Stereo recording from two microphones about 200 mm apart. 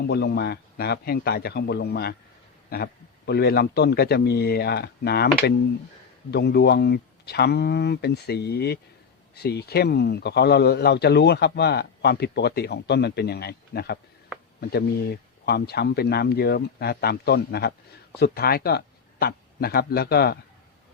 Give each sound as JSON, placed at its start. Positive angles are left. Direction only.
{"t": 0.0, "sound": "a man's voice", "side_deg": 55}